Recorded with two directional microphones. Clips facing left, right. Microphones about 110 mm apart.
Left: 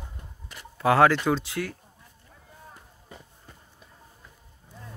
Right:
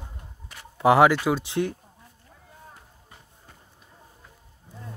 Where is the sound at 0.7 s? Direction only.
15° right (ahead or behind).